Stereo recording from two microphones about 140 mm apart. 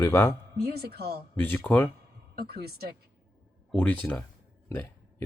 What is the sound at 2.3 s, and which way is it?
Speech, 90° right.